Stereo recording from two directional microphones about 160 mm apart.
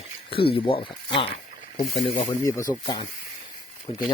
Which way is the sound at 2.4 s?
20° left (ahead or behind).